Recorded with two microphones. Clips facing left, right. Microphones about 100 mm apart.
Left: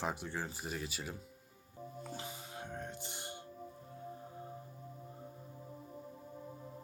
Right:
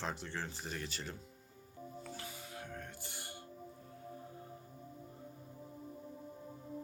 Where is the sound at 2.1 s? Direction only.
20° left (ahead or behind).